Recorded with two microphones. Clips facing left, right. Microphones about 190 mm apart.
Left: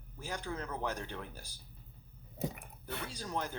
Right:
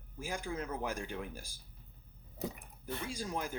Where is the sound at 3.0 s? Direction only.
10° right (ahead or behind).